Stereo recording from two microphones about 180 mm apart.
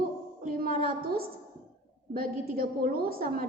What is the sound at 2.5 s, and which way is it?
Speech, 55° right (ahead or behind).